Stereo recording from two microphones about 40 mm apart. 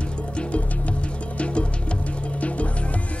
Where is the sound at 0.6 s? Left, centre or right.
Left.